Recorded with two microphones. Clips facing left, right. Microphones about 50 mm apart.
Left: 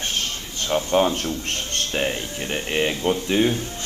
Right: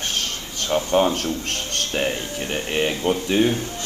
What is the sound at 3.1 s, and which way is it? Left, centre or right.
Speech, right.